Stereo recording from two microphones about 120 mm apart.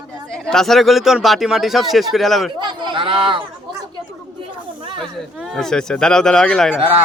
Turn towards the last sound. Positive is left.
turn(degrees=10)  # may be behind; listen again after turning